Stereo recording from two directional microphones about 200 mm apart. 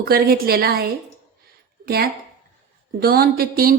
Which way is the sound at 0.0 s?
50° right (ahead or behind).